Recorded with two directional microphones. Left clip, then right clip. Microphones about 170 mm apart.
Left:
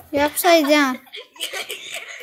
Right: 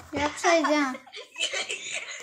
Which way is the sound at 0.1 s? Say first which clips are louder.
Left 8 dB; 50° left (ahead or behind).